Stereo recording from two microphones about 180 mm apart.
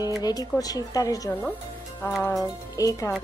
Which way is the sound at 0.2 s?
20° left (ahead or behind).